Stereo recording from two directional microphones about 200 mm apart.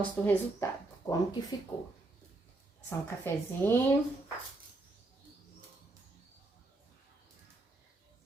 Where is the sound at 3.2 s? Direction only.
10° left (ahead or behind).